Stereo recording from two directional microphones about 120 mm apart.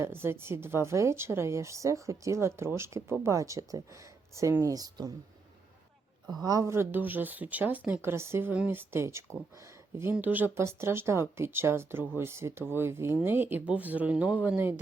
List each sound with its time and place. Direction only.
0.0 s speech: 20° right (ahead or behind)
6.4 s speech: 30° right (ahead or behind)